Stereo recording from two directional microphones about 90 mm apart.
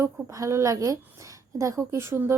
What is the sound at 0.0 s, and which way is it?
A woman's voice, 35° right (ahead or behind).